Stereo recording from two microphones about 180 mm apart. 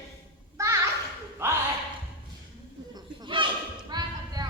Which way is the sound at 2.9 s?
25° right (ahead or behind).